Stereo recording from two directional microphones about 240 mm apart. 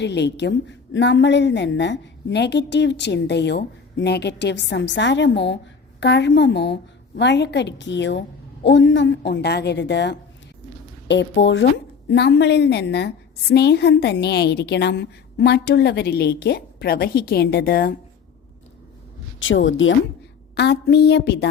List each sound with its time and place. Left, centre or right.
0.0 s a woman's voice: left
19.4 s a woman's voice: left